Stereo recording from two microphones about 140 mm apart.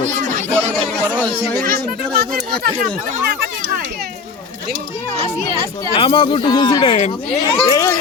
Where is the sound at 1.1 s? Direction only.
10° left (ahead or behind).